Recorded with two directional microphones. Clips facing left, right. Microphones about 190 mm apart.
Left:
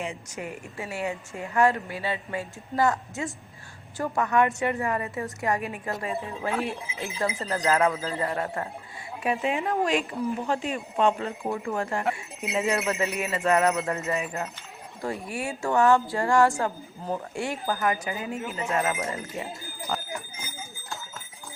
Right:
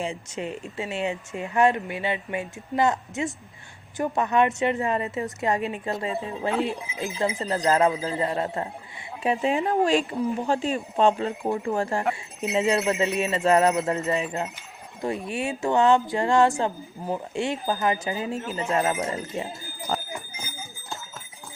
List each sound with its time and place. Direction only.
0.0 s speech: 25° right (ahead or behind)
19.9 s speech: 35° right (ahead or behind)